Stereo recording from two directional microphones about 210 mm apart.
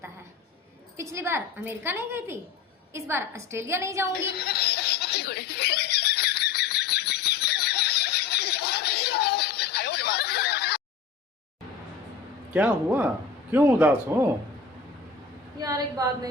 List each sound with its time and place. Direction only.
0.9 s a woman's voice: 15° right (ahead or behind)
4.3 s snicker: 50° left (ahead or behind)
12.5 s a woman's voice: 5° right (ahead or behind)
15.6 s a woman's voice: 15° right (ahead or behind)